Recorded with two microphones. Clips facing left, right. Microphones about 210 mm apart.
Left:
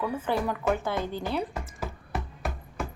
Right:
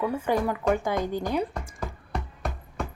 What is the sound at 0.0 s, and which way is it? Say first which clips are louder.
Speech: right 3 dB; 15° right (ahead or behind).